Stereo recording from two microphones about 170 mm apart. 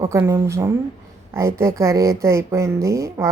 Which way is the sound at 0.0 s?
15° right (ahead or behind).